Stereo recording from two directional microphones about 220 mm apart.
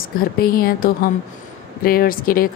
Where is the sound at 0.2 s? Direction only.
40° left (ahead or behind).